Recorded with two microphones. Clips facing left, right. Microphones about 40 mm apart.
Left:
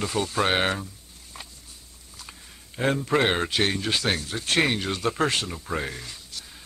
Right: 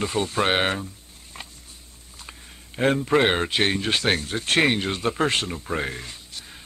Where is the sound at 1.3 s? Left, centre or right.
Right.